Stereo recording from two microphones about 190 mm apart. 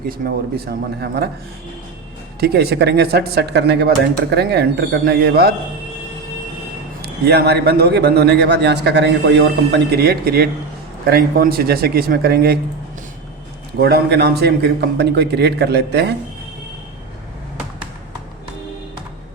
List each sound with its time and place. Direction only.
0.1 s a man's voice: 55° right (ahead or behind)
2.4 s a man's voice: 55° right (ahead or behind)
7.0 s a man's voice: 60° right (ahead or behind)
13.7 s a man's voice: 55° right (ahead or behind)